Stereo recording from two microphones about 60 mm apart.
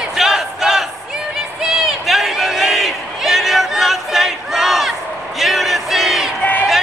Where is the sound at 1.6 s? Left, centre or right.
Centre.